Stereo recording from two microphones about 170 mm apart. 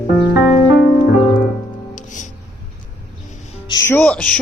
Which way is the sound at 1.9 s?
50° left (ahead or behind).